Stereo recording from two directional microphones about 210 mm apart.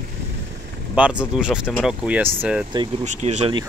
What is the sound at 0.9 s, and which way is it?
Speech, 5° right (ahead or behind).